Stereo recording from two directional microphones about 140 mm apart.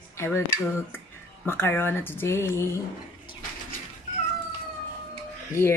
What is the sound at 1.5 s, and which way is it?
Speech, 15° left (ahead or behind).